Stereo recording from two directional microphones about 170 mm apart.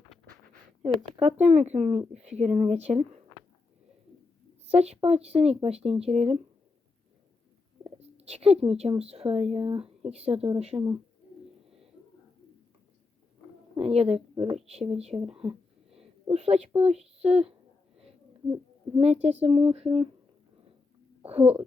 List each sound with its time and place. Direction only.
1.1 s speech: 40° right (ahead or behind)
4.7 s speech: 35° right (ahead or behind)
7.9 s speech: 35° right (ahead or behind)
13.7 s speech: 35° right (ahead or behind)
14.9 s a sound: 35° right (ahead or behind)
16.3 s speech: 40° right (ahead or behind)
18.5 s speech: 35° right (ahead or behind)
21.2 s speech: 35° right (ahead or behind)